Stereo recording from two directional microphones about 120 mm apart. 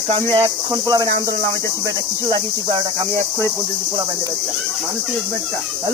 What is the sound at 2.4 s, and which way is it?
Cricket, 35° right (ahead or behind).